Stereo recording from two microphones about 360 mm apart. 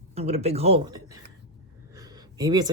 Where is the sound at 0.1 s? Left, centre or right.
Centre.